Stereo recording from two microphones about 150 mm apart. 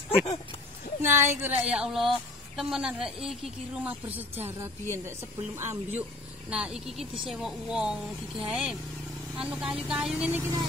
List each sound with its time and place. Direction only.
0.1 s speech: 40° left (ahead or behind)
1.0 s a woman's voice: 15° right (ahead or behind)
6.5 s a woman's voice: 5° right (ahead or behind)